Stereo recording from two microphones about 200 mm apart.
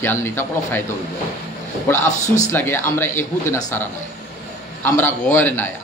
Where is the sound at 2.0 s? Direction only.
35° left (ahead or behind).